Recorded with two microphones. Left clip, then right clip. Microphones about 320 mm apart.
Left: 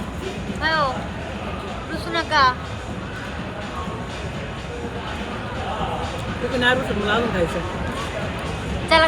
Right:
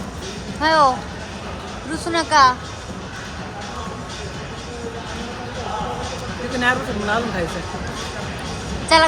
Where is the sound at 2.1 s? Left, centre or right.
Centre.